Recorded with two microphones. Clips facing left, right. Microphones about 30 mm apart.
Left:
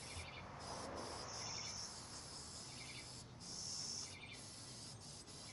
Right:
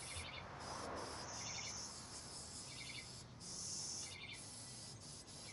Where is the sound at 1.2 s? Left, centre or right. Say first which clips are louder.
Even; left.